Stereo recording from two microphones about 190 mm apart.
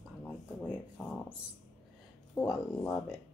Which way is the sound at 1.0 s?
Centre (ahead or behind).